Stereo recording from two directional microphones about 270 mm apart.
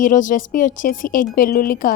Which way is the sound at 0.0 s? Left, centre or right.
Left.